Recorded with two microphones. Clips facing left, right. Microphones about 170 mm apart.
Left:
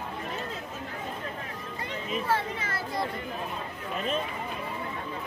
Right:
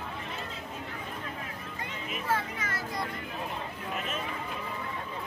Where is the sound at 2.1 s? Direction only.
30° left (ahead or behind).